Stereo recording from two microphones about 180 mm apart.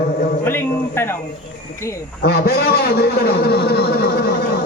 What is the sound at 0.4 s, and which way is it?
Speech, 15° left (ahead or behind).